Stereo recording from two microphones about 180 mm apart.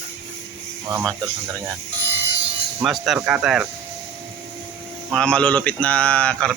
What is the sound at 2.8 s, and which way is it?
Speech, centre (ahead or behind).